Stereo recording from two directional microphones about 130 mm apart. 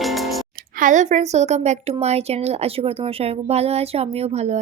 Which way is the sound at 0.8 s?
75° right (ahead or behind).